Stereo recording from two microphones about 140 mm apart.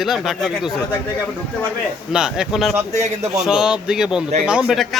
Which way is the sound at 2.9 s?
55° right (ahead or behind).